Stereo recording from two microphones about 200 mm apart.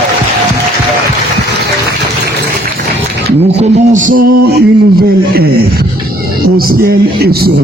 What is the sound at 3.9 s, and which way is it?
Speech, 40° right (ahead or behind).